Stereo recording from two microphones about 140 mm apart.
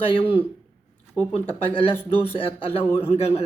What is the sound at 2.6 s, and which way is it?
Speech, 40° left (ahead or behind).